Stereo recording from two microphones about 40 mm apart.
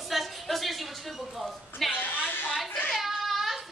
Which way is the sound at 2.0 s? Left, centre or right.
Left.